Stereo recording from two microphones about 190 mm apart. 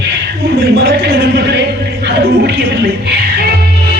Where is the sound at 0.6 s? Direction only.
55° right (ahead or behind).